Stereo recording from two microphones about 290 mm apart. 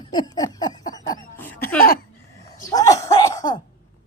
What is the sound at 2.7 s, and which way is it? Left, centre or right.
Cough, centre.